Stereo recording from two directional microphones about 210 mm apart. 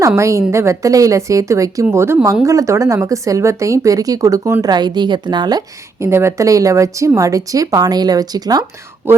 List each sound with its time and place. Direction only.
0.2 s speech: 15° right (ahead or behind)